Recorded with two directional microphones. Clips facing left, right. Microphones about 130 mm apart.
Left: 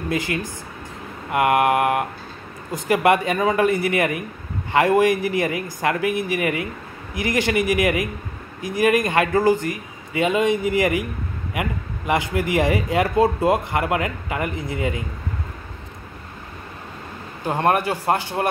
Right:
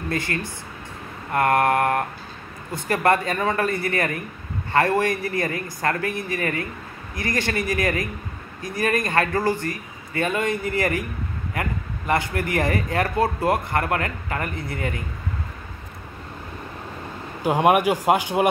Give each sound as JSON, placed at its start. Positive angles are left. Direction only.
{"t": 0.1, "sound": "a man's voice", "side_deg": 15}
{"t": 17.4, "sound": "speech", "side_deg": -10}